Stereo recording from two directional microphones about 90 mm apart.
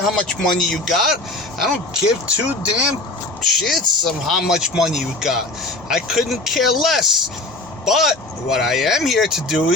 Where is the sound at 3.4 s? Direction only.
Centre (ahead or behind).